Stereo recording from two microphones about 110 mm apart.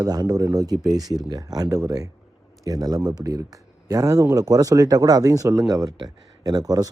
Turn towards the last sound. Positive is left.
turn(degrees=-35)  # may be behind; listen again after turning